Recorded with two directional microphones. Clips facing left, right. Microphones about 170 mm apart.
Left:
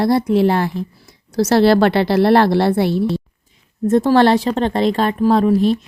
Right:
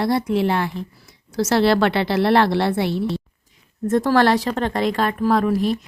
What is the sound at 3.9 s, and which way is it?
Speech, 25° left (ahead or behind).